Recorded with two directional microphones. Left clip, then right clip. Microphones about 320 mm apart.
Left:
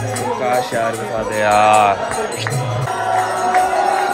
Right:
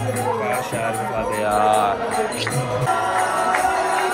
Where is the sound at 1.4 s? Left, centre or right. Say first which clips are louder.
Left 7 dB; left.